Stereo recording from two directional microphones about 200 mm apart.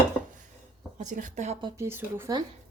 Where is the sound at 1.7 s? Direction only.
15° right (ahead or behind).